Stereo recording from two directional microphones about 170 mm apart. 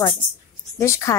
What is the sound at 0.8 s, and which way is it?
Speech, 15° left (ahead or behind).